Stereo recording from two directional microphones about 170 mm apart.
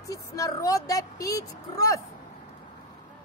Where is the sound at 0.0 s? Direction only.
20° left (ahead or behind).